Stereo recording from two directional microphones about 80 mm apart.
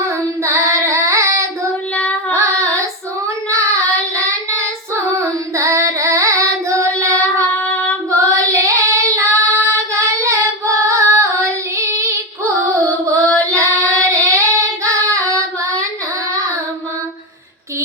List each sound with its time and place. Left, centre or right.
0.4 s child singing: right
2.3 s female singing: right
5.1 s singing: right
7.2 s child singing: centre
8.2 s child singing: right
12.6 s carnatic music: right
13.5 s singing: right